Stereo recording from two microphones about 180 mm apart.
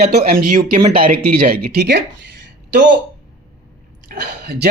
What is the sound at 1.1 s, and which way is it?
Speech, 55° right (ahead or behind).